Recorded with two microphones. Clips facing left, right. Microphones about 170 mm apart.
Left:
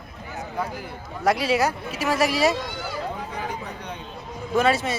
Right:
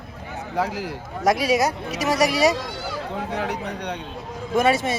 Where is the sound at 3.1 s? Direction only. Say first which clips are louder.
Right 5 dB; 75° right (ahead or behind).